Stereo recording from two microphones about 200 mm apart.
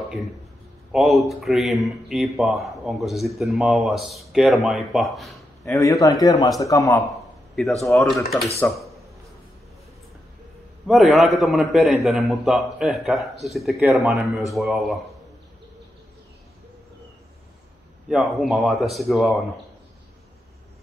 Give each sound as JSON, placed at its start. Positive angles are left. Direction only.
{"t": 0.9, "sound": "speech", "side_deg": 0}
{"t": 5.7, "sound": "a man's voice", "side_deg": 15}
{"t": 7.5, "sound": "speech", "side_deg": 0}
{"t": 8.5, "sound": "a sound", "side_deg": 0}
{"t": 10.9, "sound": "speech", "side_deg": 0}
{"t": 18.0, "sound": "speech", "side_deg": 0}